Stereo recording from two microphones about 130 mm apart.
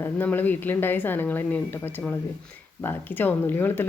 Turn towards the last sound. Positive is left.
turn(degrees=15)  # may be behind; listen again after turning